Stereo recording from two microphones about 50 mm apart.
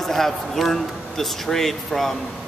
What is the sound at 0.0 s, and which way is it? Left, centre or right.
A man's voice, centre.